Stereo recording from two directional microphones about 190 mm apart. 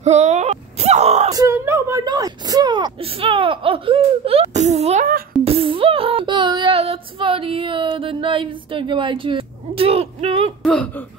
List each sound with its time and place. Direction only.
0.0 s whimper: 35° right (ahead or behind)
1.3 s speech: 15° right (ahead or behind); by 5.0 s 35° right (ahead or behind)
5.4 s child singing: 30° right (ahead or behind)
10.6 s speech: 5° left (ahead or behind)